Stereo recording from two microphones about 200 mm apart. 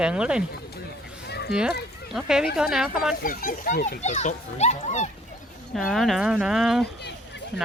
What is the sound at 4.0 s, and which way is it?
A child's voice, 35° left (ahead or behind).